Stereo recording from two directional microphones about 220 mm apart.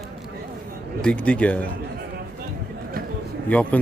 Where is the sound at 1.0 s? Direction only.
5° left (ahead or behind).